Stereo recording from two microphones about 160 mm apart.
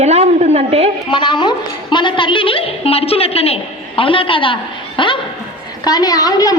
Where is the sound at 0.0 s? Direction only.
40° right (ahead or behind).